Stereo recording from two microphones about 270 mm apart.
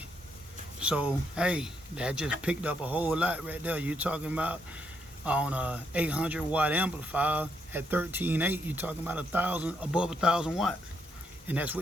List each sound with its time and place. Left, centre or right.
0.8 s speech: centre